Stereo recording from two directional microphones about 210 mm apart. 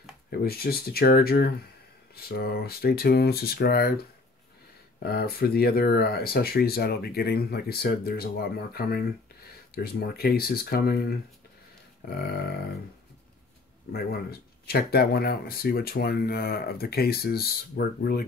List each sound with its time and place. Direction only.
0.4 s speech: 45° left (ahead or behind)
5.0 s speech: 45° left (ahead or behind)
13.9 s speech: 45° left (ahead or behind)